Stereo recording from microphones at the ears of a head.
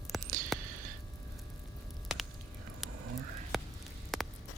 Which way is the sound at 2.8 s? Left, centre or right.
Right.